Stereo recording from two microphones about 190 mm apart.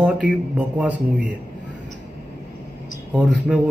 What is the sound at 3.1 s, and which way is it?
Speech, 5° right (ahead or behind).